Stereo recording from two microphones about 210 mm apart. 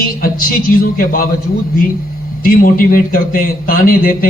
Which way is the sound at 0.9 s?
40° left (ahead or behind).